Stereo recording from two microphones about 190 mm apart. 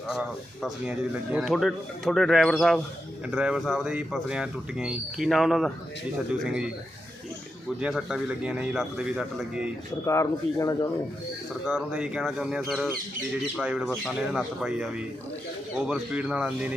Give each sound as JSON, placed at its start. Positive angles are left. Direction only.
{"t": 0.1, "sound": "speech", "side_deg": -5}
{"t": 7.8, "sound": "speech", "side_deg": -5}
{"t": 10.1, "sound": "speech", "side_deg": 15}
{"t": 11.6, "sound": "speech", "side_deg": -5}